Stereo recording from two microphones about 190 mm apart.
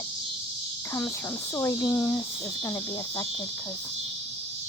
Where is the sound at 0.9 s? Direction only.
15° left (ahead or behind).